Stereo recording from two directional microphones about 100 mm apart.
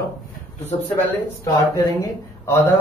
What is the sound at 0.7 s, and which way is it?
Speech, 85° left.